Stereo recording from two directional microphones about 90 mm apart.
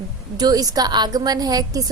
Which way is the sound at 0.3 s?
45° right (ahead or behind).